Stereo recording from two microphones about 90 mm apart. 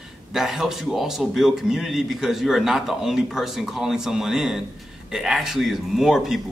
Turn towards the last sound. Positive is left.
turn(degrees=-5)  # may be behind; listen again after turning